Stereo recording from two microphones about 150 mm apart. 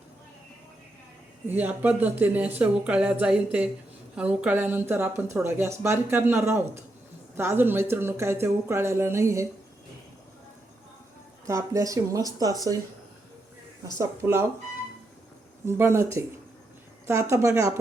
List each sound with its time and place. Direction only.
1.5 s speech: 10° right (ahead or behind)
11.4 s speech: 20° right (ahead or behind)
13.8 s speech: 20° right (ahead or behind)
15.6 s speech: 15° right (ahead or behind)
17.1 s speech: 20° right (ahead or behind)